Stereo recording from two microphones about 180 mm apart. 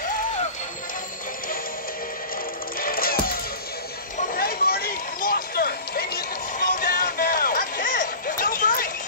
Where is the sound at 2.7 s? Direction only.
55° left (ahead or behind).